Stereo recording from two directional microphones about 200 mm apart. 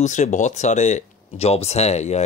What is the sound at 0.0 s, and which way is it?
Speech, 35° left (ahead or behind).